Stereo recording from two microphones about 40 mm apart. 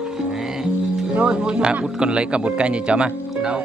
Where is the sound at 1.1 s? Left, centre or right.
Right.